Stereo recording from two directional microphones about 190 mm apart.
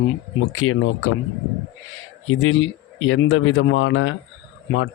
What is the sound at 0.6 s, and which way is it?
Speech, 90° left.